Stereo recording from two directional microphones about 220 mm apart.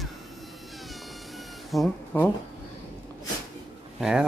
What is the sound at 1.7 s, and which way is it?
Speech, 5° left (ahead or behind).